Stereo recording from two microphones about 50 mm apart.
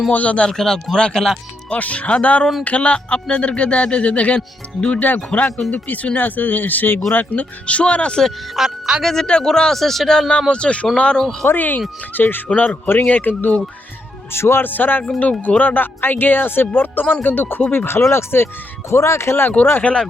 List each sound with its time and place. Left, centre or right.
0.1 s speech: left
0.5 s speech: centre
1.7 s speech: left
8.5 s speech: centre
9.0 s speech: centre
10.5 s speech: left
11.4 s speech: left
14.3 s speech: left
14.6 s speech: left
18.9 s speech: left
19.8 s speech: centre